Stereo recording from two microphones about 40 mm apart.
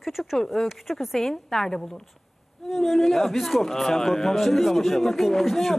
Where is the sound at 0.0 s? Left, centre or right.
Centre.